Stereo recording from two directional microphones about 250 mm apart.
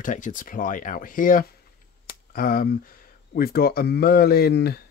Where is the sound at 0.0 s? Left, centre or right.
Left.